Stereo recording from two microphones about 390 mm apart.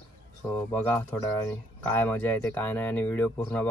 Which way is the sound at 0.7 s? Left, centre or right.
Centre.